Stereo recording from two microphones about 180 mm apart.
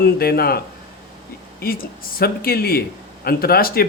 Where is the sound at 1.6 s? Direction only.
55° left (ahead or behind).